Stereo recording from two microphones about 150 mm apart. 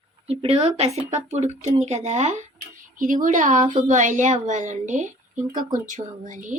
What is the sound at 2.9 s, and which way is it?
Speech, 65° right (ahead or behind).